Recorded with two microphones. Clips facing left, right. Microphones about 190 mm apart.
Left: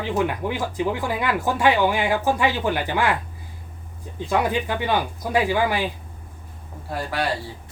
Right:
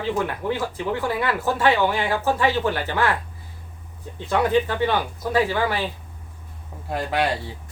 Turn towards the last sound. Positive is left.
turn(degrees=-20)  # may be behind; listen again after turning